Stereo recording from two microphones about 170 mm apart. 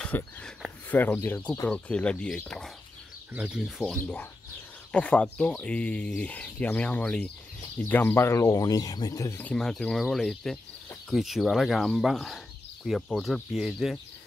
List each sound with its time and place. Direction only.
0.0 s speech: 5° left (ahead or behind)
4.0 s speech: 10° left (ahead or behind)